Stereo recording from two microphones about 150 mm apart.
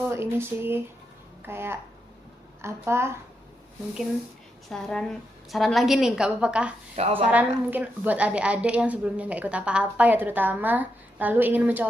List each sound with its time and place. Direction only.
0.1 s a woman's voice: 15° right (ahead or behind)
4.7 s a woman's voice: 5° left (ahead or behind)
6.9 s a woman's voice: 45° right (ahead or behind)
7.3 s a woman's voice: 10° right (ahead or behind)